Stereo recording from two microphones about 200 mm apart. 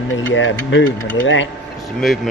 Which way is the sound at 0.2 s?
70° left (ahead or behind).